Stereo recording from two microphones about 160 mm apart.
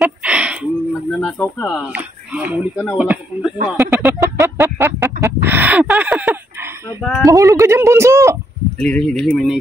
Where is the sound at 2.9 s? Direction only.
10° right (ahead or behind).